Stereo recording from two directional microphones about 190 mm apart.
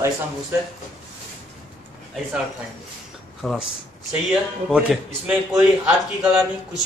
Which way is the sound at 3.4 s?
Centre (ahead or behind).